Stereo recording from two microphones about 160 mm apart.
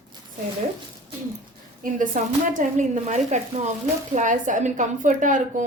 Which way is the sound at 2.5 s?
50° right (ahead or behind).